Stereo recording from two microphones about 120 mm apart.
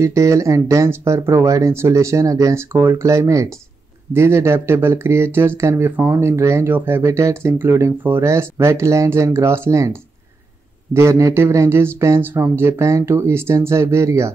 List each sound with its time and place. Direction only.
0.0 s speech: 25° right (ahead or behind)